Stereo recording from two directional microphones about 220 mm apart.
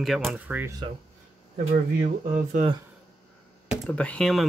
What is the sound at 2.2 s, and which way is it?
Speech, 30° right (ahead or behind).